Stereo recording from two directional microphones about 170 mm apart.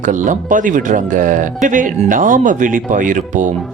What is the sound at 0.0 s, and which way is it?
Speech, 50° right (ahead or behind).